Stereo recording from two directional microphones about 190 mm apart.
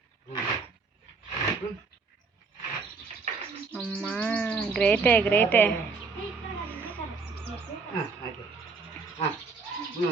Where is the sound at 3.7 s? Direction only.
5° left (ahead or behind).